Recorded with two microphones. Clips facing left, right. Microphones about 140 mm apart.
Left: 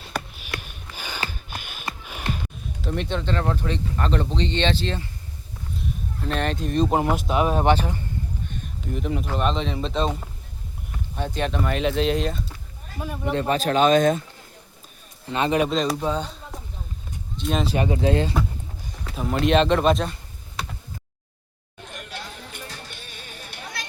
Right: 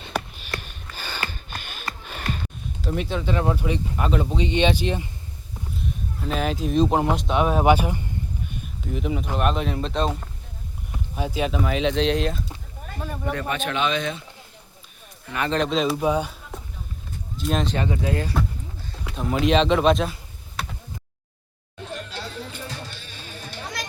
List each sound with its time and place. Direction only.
0.3 s a sound: 10° left (ahead or behind)
2.0 s music: 10° left (ahead or behind)
2.8 s speech: 5° right (ahead or behind)
5.7 s speech: centre (ahead or behind)
8.9 s speech: centre (ahead or behind)
13.3 s speech: 30° left (ahead or behind)
15.3 s speech: 20° left (ahead or behind)
16.0 s speech: 10° right (ahead or behind)
17.7 s speech: 20° left (ahead or behind)
19.1 s speech: centre (ahead or behind)
22.5 s music: 55° left (ahead or behind)